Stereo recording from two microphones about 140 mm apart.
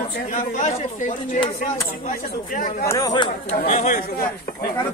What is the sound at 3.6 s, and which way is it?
Speech, 65° left (ahead or behind).